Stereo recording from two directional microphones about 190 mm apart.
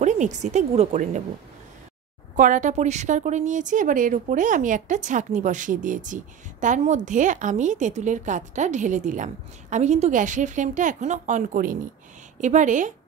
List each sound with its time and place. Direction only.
0.0 s a woman's voice: 40° right (ahead or behind)
2.3 s a woman's voice: 40° right (ahead or behind)